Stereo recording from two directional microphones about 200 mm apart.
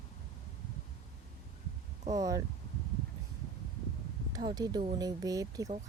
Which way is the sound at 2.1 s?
15° right (ahead or behind).